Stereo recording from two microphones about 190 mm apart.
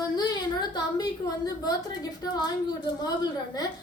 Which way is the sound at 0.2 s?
20° left (ahead or behind).